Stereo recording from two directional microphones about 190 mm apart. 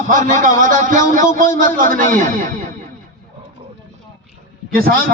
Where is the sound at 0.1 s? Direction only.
40° right (ahead or behind).